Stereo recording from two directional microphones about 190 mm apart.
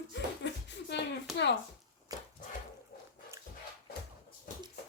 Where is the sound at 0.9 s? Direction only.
65° left (ahead or behind).